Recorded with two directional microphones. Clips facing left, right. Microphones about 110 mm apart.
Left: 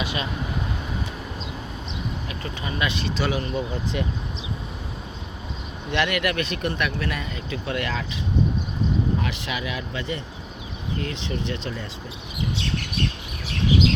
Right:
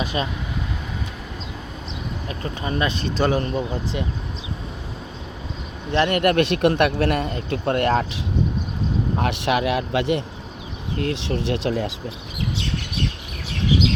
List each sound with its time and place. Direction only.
0.0 s speech: 40° right (ahead or behind)
2.4 s speech: 40° right (ahead or behind)
3.9 s speech: 25° right (ahead or behind)
5.9 s speech: 40° right (ahead or behind)
6.3 s speech: 65° right (ahead or behind)
10.9 s speech: 60° right (ahead or behind); by 11.9 s 80° right